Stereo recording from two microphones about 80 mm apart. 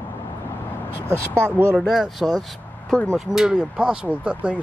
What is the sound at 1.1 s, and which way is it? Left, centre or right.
Speech, right.